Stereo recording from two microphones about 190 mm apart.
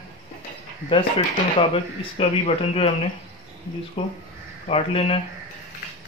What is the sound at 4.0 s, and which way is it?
Speech, 25° left (ahead or behind).